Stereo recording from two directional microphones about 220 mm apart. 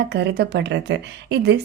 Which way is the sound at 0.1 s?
50° right (ahead or behind).